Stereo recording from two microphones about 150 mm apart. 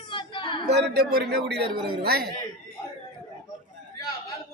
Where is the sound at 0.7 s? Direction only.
90° right.